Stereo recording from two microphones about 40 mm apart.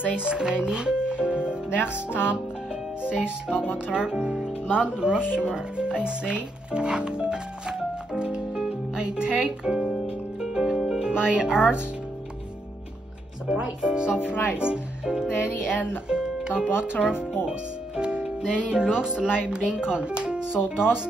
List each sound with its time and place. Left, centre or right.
0.0 s speech: right
1.8 s music: left
3.0 s speech: right
8.2 s music: right
9.4 s speech: centre
9.9 s music: centre
11.0 s speech: centre
13.5 s speech: right
14.2 s music: left
14.6 s speech: right
16.1 s music: right
16.5 s speech: right
17.5 s music: right
18.7 s speech: centre